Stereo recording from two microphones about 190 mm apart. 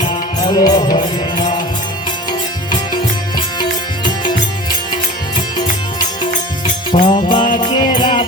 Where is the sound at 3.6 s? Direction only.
25° left (ahead or behind).